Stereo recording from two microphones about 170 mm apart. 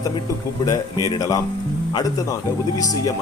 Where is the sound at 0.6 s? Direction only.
20° left (ahead or behind).